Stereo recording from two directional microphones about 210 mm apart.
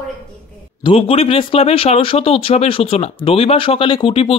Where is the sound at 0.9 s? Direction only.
25° left (ahead or behind).